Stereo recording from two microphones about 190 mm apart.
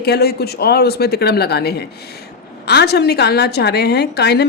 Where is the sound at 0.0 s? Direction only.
55° left (ahead or behind).